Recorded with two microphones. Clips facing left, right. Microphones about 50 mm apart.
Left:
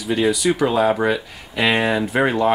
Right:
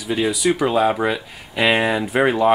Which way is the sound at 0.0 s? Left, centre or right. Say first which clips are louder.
Left 1 dB; centre.